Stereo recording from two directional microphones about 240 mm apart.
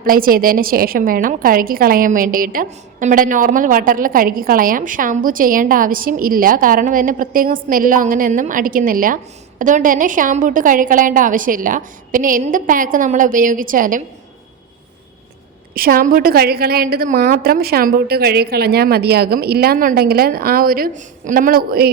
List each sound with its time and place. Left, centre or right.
0.0 s a woman's voice: right
15.7 s a woman's voice: right